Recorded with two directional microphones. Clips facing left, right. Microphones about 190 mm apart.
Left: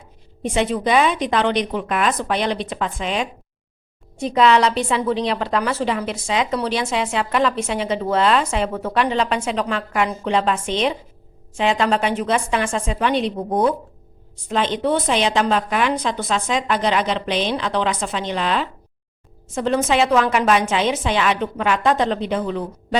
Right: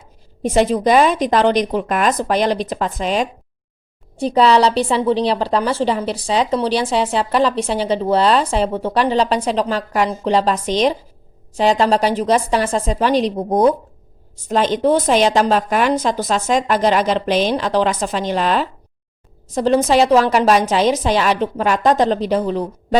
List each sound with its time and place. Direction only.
0.4 s a woman's voice: 40° right (ahead or behind)